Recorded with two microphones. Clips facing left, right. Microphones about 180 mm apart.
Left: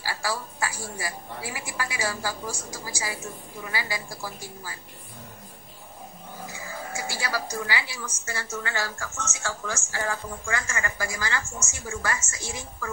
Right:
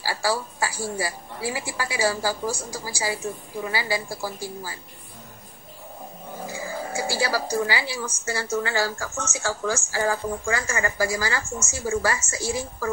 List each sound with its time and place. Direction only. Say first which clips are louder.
0.0 s a woman's voice: right 5 dB; 30° right (ahead or behind)
6.4 s speech: right 6 dB; 30° right (ahead or behind)